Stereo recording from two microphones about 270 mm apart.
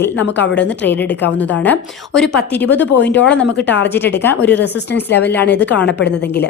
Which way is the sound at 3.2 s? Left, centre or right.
Centre.